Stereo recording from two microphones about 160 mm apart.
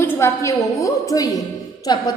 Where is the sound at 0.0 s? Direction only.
15° left (ahead or behind).